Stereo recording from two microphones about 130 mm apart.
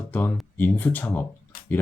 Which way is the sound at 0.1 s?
10° left (ahead or behind).